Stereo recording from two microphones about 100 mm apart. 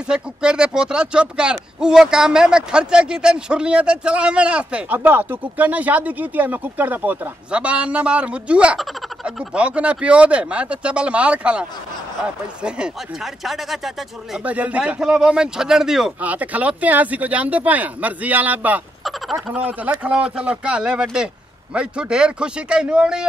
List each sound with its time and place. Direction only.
0.1 s speech: 10° right (ahead or behind)
12.6 s speech: 10° right (ahead or behind)
14.4 s speech: 15° right (ahead or behind)
19.0 s speech: centre (ahead or behind)